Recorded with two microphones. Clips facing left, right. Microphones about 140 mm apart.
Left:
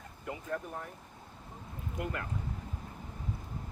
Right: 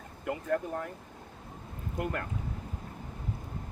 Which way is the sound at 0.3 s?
80° right.